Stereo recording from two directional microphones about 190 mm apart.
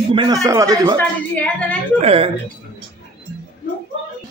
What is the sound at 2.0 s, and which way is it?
Speech, 30° right (ahead or behind).